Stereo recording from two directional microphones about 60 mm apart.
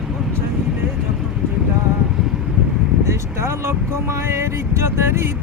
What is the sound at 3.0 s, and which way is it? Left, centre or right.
Speech, right.